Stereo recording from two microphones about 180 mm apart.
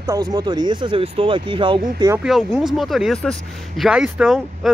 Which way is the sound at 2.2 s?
Centre (ahead or behind).